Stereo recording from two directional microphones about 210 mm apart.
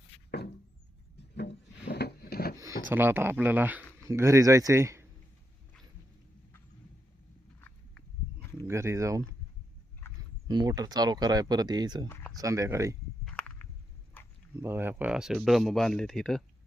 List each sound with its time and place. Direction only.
1.4 s wood: 50° left (ahead or behind)
2.9 s speech: 10° right (ahead or behind)
7.6 s livestock: 10° left (ahead or behind)
8.6 s a sound: 15° right (ahead or behind)
10.5 s speech: 20° right (ahead or behind)
12.0 s speech: 10° left (ahead or behind)
12.4 s speech: 15° right (ahead or behind)
13.2 s walk: 5° left (ahead or behind)
14.2 s a sound: 10° left (ahead or behind)
14.6 s speech: 10° right (ahead or behind)